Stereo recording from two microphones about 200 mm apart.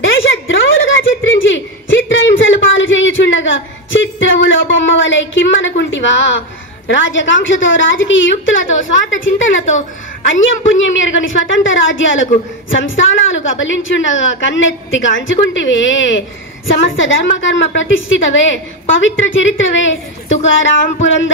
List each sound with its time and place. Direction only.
0.0 s a sound: 75° left (ahead or behind)
6.9 s a woman's voice: 70° left (ahead or behind)
11.0 s a woman's voice: 70° left (ahead or behind)